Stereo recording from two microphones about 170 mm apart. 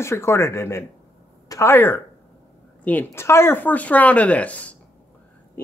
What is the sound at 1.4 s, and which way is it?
Speech, 15° left (ahead or behind).